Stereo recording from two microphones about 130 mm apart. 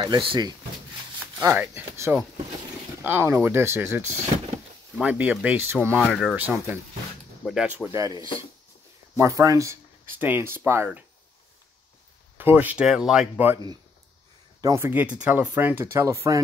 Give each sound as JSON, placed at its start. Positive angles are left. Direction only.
{"t": 0.0, "sound": "speech", "side_deg": -35}
{"t": 1.4, "sound": "speech", "side_deg": -20}
{"t": 4.3, "sound": "a sound", "side_deg": -40}
{"t": 5.0, "sound": "speech", "side_deg": -10}
{"t": 6.0, "sound": "speech", "side_deg": 0}
{"t": 6.3, "sound": "speech", "side_deg": -15}
{"t": 7.9, "sound": "speech", "side_deg": -25}
{"t": 9.2, "sound": "speech", "side_deg": -25}
{"t": 12.4, "sound": "speech", "side_deg": -15}
{"t": 14.6, "sound": "speech", "side_deg": -25}
{"t": 14.9, "sound": "speech", "side_deg": -10}